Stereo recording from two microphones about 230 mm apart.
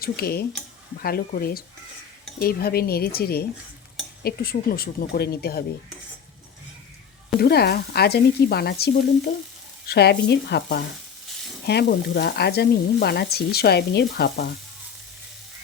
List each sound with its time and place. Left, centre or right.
0.0 s speech: left
7.3 s sizzle: left